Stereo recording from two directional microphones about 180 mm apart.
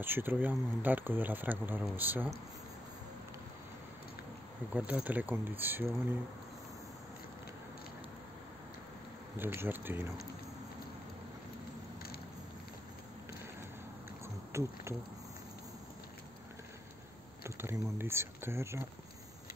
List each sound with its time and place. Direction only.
0.0 s speech: 10° right (ahead or behind)
4.7 s speech: 10° right (ahead or behind)
9.4 s speech: 10° right (ahead or behind)
14.5 s speech: 15° right (ahead or behind)
17.4 s speech: 15° right (ahead or behind)